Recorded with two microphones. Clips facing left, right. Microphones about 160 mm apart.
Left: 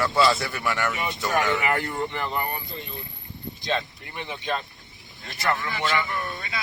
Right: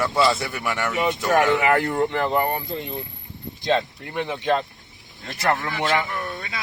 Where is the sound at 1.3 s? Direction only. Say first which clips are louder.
Right 5 dB; 65° right (ahead or behind).